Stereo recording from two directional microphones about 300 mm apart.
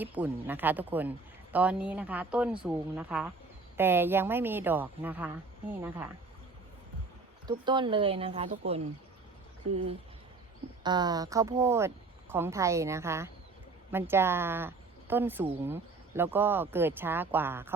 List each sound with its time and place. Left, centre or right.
0.0 s speech: centre
7.4 s speech: centre
10.8 s speech: centre